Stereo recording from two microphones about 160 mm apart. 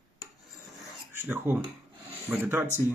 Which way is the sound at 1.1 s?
15° right (ahead or behind).